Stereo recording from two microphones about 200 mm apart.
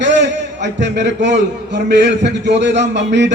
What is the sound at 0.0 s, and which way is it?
A man's voice, 60° right (ahead or behind).